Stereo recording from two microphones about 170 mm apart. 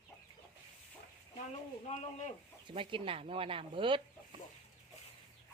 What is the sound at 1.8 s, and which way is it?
Speech, 45° left (ahead or behind).